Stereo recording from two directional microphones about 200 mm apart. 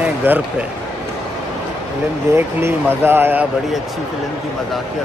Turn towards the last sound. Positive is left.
turn(degrees=-10)  # may be behind; listen again after turning